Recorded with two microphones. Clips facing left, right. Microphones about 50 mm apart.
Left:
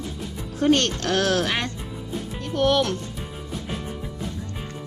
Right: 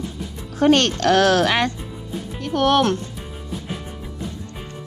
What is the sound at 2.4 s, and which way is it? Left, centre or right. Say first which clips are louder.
Music: right 3 dB; right.